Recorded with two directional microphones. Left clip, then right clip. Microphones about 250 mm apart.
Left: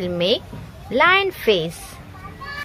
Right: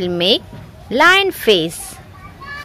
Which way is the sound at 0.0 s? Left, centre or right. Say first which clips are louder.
Right 5 dB; right.